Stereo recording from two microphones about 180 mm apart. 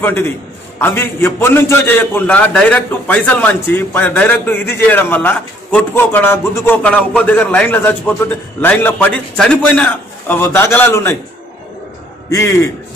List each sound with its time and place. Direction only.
0.0 s a man's voice: 10° left (ahead or behind)
12.3 s a man's voice: 15° left (ahead or behind)